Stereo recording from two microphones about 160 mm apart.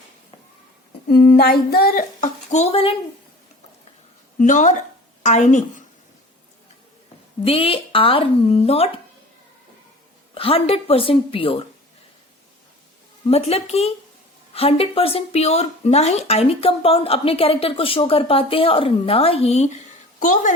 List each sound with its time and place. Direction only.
1.1 s a sound: centre (ahead or behind)
1.4 s female singing: 70° left (ahead or behind)
2.5 s speech: 40° left (ahead or behind)
4.4 s a woman's voice: 50° left (ahead or behind)
7.4 s speech: 35° left (ahead or behind)
10.3 s speech: 35° left (ahead or behind)
13.2 s speech: 40° left (ahead or behind)